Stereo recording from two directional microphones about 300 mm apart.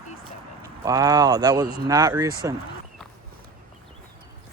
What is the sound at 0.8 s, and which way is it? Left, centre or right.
Speech, centre.